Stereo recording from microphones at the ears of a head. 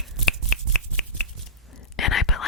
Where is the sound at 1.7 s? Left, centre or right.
Left.